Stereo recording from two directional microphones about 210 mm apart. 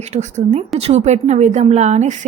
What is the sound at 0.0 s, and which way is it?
A woman's voice, 30° right (ahead or behind).